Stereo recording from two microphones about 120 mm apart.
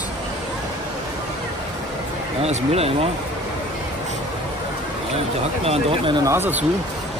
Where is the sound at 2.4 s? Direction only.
60° right (ahead or behind).